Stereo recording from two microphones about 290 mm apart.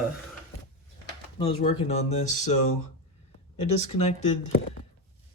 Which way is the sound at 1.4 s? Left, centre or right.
Left.